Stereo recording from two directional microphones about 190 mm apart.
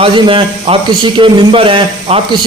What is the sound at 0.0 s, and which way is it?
A man's voice, 30° right (ahead or behind).